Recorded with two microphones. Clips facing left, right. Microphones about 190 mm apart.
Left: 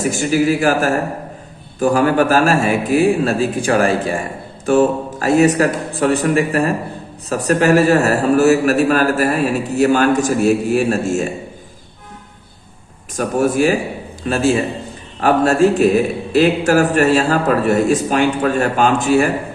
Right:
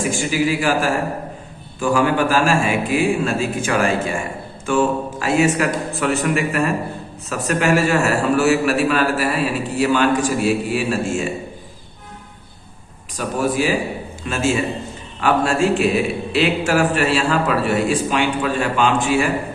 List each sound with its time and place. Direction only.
0.0 s a man's voice: 40° left (ahead or behind)
13.1 s a man's voice: 50° left (ahead or behind)
14.3 s a man's voice: 35° left (ahead or behind)